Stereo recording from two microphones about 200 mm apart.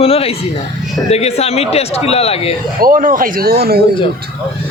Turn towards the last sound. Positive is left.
turn(degrees=-50)  # may be behind; listen again after turning